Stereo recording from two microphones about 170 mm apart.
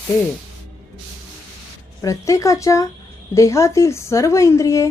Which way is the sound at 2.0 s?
20° left (ahead or behind).